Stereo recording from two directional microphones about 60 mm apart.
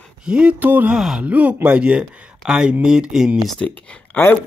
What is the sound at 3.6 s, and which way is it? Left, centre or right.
Speech, centre.